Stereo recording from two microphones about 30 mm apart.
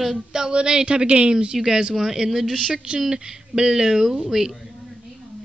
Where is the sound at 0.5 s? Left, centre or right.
Right.